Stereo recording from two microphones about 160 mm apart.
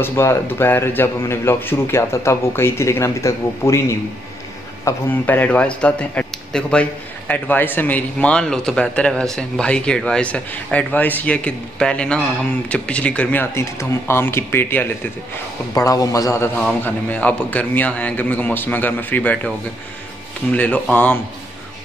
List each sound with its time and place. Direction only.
0.0 s a man's voice: 15° left (ahead or behind)
4.8 s a man's voice: 10° left (ahead or behind)
16.5 s a man's voice: 10° left (ahead or behind)
20.5 s a man's voice: 10° left (ahead or behind)